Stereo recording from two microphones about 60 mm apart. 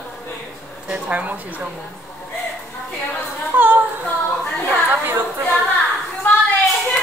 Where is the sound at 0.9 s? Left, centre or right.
Right.